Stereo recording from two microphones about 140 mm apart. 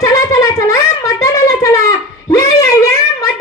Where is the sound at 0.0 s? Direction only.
25° left (ahead or behind).